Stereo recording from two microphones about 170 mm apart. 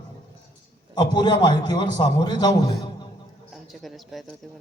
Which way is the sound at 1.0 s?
25° left (ahead or behind).